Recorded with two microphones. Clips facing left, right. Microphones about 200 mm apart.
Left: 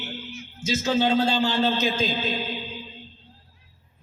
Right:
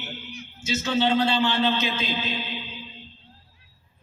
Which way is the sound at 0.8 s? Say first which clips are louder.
Left 1 dB; 40° left (ahead or behind).